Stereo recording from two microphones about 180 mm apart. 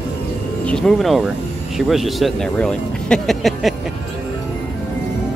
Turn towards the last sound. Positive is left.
turn(degrees=0)  # may be behind; listen again after turning